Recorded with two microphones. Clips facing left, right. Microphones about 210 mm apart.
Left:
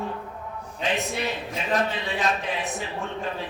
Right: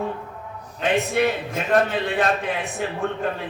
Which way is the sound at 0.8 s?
55° right (ahead or behind).